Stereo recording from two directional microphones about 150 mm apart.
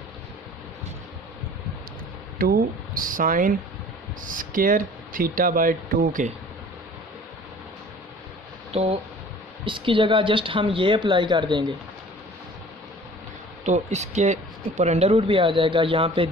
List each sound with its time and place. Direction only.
2.3 s speech: 80° right
8.7 s speech: 40° right (ahead or behind)
13.7 s speech: 50° right (ahead or behind)